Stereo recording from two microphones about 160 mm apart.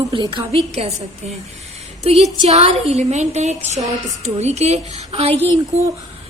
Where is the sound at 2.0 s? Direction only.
40° right (ahead or behind).